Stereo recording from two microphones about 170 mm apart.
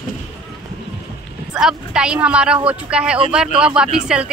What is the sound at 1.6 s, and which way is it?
Speech, 5° right (ahead or behind).